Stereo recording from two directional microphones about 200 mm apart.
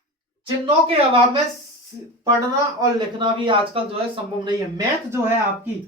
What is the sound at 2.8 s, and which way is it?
A man's voice, 25° right (ahead or behind).